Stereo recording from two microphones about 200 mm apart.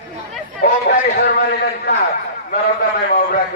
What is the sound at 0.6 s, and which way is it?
A man's voice, 50° left (ahead or behind).